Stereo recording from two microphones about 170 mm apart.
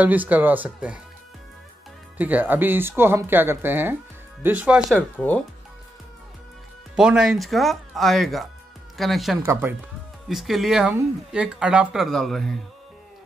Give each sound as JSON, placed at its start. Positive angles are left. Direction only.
{"t": 0.0, "sound": "speech", "side_deg": -10}
{"t": 2.1, "sound": "speech", "side_deg": -10}
{"t": 4.9, "sound": "speech", "side_deg": 10}
{"t": 7.0, "sound": "speech", "side_deg": -5}
{"t": 9.4, "sound": "speech", "side_deg": -15}
{"t": 10.2, "sound": "speech", "side_deg": 0}